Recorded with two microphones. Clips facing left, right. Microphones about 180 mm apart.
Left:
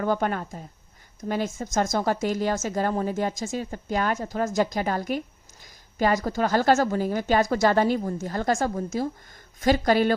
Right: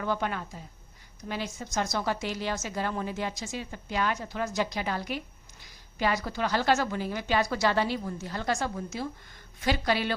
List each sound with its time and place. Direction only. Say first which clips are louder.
0.0 s speech: left 6 dB; 45° left (ahead or behind)